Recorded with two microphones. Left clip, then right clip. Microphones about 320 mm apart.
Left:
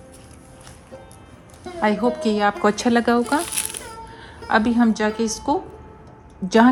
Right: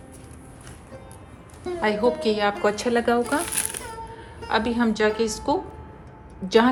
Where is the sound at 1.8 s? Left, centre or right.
Left.